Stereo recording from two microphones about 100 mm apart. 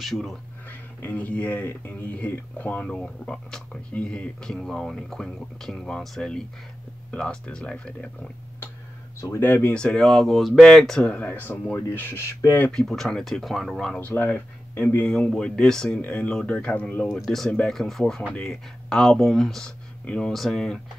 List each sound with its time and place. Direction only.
0.0 s speech: centre (ahead or behind)
0.7 s speech: 15° left (ahead or behind)
9.2 s speech: 25° left (ahead or behind)
12.7 s speech: 5° left (ahead or behind)
13.9 s speech: 20° left (ahead or behind)
15.1 s speech: 5° left (ahead or behind)
17.5 s speech: 15° left (ahead or behind)
17.7 s speech: centre (ahead or behind)